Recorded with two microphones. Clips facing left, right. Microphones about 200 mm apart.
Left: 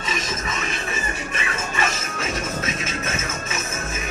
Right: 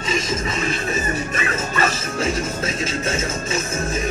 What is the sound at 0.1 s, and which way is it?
Music, 30° right (ahead or behind).